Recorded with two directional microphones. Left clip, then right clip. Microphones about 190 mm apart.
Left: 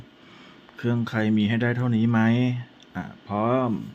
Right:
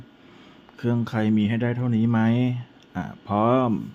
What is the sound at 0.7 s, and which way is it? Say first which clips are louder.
Speech: even; 10° right (ahead or behind).